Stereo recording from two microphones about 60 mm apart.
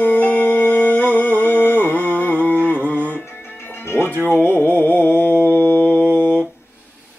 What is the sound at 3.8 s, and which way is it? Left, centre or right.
Music, left.